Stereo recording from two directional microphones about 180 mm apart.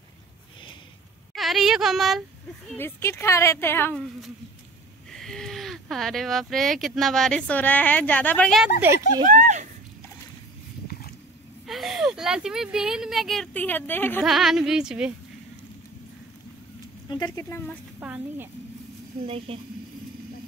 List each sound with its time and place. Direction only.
1.3 s speech: centre (ahead or behind)
2.8 s a woman's voice: 15° left (ahead or behind)
5.1 s speech: 5° left (ahead or behind)
8.8 s a woman's voice: 15° right (ahead or behind)
9.2 s speech: 45° right (ahead or behind)
10.9 s a sound: 55° left (ahead or behind)
11.6 s speech: centre (ahead or behind)
14.2 s speech: centre (ahead or behind)
17.1 s speech: 25° left (ahead or behind)
17.5 s a woman's voice: 10° left (ahead or behind)
18.0 s a woman's voice: 10° right (ahead or behind)
19.2 s speech: 30° right (ahead or behind)